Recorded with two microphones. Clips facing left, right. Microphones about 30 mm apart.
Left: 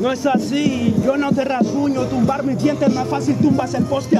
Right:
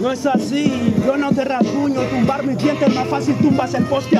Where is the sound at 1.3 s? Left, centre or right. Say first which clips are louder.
Even; centre.